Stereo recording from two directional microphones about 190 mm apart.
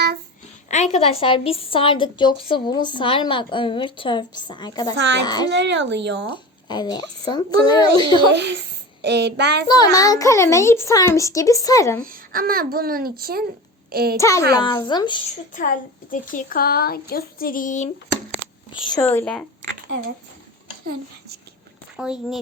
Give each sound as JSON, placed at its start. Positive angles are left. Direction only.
{"t": 0.7, "sound": "a woman's voice", "side_deg": 35}
{"t": 4.9, "sound": "speech", "side_deg": -70}
{"t": 5.2, "sound": "a woman's voice", "side_deg": 20}
{"t": 5.5, "sound": "speech", "side_deg": -70}
{"t": 6.3, "sound": "a woman's voice", "side_deg": 25}
{"t": 8.3, "sound": "child singing", "side_deg": -65}
{"t": 9.6, "sound": "a child's voice", "side_deg": 20}
{"t": 12.0, "sound": "a child's voice", "side_deg": -50}
{"t": 13.9, "sound": "child singing", "side_deg": -55}
{"t": 14.2, "sound": "a child's voice", "side_deg": 15}
{"t": 15.5, "sound": "a woman's voice", "side_deg": 45}
{"t": 18.7, "sound": "a child's voice", "side_deg": 25}
{"t": 21.9, "sound": "speech", "side_deg": -5}